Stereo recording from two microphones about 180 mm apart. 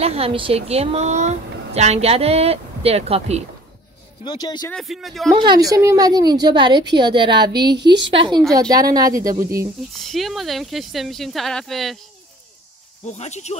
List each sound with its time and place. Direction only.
0.0 s a woman's voice: 35° right (ahead or behind)
4.2 s speech: 25° left (ahead or behind)
4.6 s speech: centre (ahead or behind)
5.4 s a woman's voice: 20° right (ahead or behind)
9.9 s speech: centre (ahead or behind)
13.0 s speech: 40° left (ahead or behind)